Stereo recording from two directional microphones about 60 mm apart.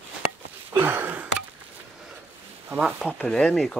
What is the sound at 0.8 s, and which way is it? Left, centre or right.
Wheeze, right.